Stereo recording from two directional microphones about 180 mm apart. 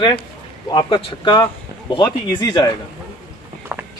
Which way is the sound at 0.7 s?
25° left (ahead or behind).